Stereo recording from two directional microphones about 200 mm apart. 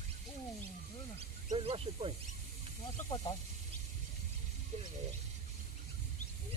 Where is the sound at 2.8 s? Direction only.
20° left (ahead or behind).